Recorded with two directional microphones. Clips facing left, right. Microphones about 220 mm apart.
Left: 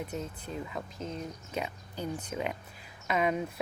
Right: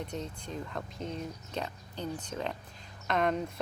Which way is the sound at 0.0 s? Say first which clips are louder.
Left 1 dB; 5° left (ahead or behind).